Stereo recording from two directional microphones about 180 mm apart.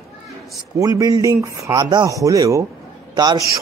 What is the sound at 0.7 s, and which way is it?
Speech, 20° right (ahead or behind).